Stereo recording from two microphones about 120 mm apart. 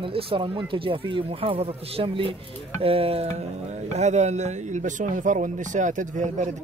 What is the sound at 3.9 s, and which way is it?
Speech, 70° right (ahead or behind).